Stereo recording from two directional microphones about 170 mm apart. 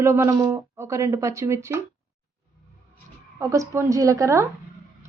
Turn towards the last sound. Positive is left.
turn(degrees=-15)  # may be behind; listen again after turning